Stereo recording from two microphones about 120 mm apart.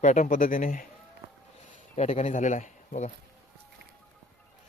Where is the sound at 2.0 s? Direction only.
70° left (ahead or behind).